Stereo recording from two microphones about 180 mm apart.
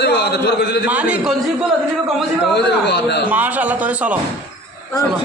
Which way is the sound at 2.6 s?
70° left (ahead or behind).